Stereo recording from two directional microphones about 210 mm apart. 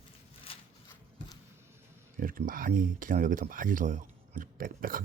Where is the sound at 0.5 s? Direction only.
25° left (ahead or behind).